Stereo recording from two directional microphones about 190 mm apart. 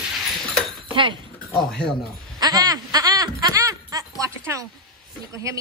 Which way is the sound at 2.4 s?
20° right (ahead or behind).